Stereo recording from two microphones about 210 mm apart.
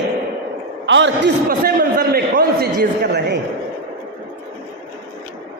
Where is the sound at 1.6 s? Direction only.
45° right (ahead or behind).